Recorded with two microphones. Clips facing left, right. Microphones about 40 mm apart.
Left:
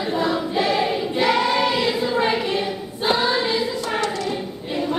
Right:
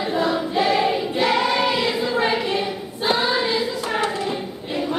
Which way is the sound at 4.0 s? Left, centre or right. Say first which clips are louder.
Right 1 dB; right.